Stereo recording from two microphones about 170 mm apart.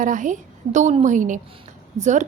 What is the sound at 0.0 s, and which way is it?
A woman's voice, 50° right (ahead or behind).